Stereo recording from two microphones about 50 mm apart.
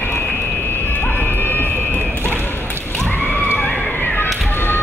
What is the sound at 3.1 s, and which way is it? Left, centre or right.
Neigh, left.